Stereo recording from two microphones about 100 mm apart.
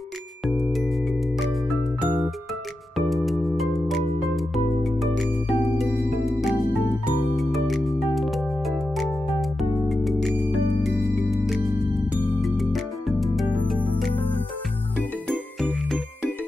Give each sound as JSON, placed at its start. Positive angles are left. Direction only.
{"t": 2.0, "sound": "music", "side_deg": -15}
{"t": 3.1, "sound": "music", "side_deg": 0}
{"t": 4.8, "sound": "music", "side_deg": 0}
{"t": 15.0, "sound": "jingle", "side_deg": 0}